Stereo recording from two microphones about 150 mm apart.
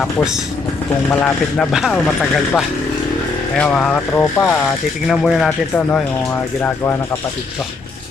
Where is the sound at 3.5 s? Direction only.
5° left (ahead or behind).